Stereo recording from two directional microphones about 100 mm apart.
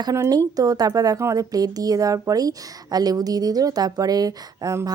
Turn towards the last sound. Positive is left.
turn(degrees=-35)  # may be behind; listen again after turning